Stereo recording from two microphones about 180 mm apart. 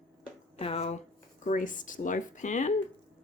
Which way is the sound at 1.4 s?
45° left (ahead or behind).